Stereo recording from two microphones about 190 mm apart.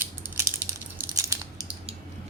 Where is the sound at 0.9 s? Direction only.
15° right (ahead or behind).